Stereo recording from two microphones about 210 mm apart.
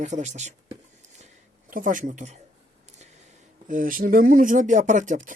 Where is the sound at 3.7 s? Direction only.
40° right (ahead or behind).